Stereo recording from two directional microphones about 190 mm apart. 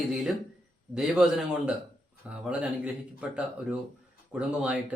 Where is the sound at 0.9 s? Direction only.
5° right (ahead or behind).